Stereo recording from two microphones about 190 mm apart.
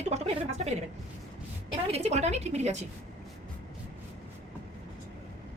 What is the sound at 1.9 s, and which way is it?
Speech, 35° right (ahead or behind).